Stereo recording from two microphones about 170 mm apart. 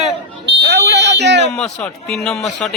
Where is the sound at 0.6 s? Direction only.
75° right (ahead or behind); by 1.4 s 90° right.